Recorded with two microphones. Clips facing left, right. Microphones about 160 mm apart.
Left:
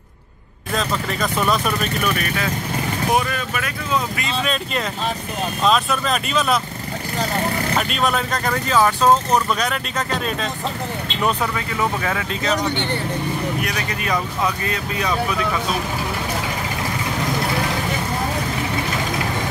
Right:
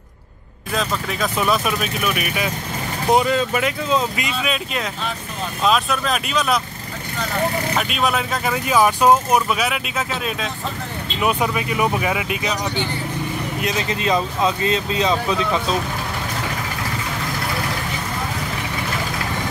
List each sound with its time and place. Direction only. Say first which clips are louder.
0.7 s speech: even; centre (ahead or behind)
3.1 s speech: right 6 dB; 25° right (ahead or behind)
4.4 s speech: left 2 dB; 5° right (ahead or behind)
7.7 s speech: even; 5° right (ahead or behind)
13.6 s speech: right 2 dB; 20° right (ahead or behind)